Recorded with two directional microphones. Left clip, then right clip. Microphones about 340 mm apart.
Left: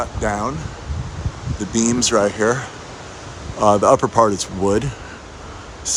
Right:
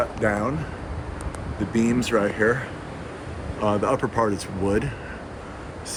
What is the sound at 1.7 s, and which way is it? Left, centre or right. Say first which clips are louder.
Speech: left 5 dB; centre.